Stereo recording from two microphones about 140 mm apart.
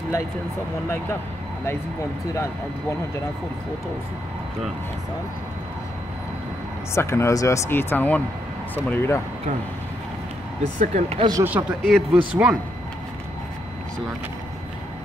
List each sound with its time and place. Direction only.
2.3 s speech: 20° left (ahead or behind)
6.9 s speech: 20° left (ahead or behind)
10.8 s speech: 60° right (ahead or behind)
11.1 s speech: 30° right (ahead or behind)
11.4 s a man's voice: 10° right (ahead or behind)